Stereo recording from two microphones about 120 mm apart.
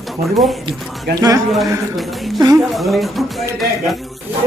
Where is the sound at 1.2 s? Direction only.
30° right (ahead or behind).